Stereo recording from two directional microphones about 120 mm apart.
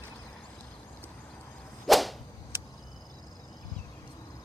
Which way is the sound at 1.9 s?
Centre (ahead or behind).